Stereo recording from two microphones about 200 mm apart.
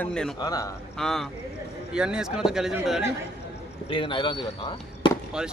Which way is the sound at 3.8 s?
25° left (ahead or behind).